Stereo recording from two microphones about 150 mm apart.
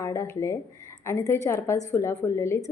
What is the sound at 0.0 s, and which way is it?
A woman's voice, 20° left (ahead or behind).